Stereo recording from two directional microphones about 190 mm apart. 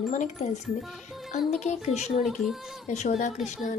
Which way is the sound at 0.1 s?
40° left (ahead or behind).